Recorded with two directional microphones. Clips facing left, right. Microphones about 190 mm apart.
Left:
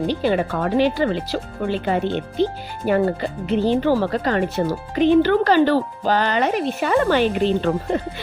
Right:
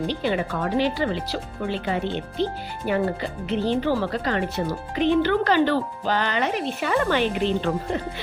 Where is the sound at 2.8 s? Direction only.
40° left (ahead or behind).